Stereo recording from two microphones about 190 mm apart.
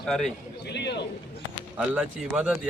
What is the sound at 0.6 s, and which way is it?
Speech, 65° left (ahead or behind).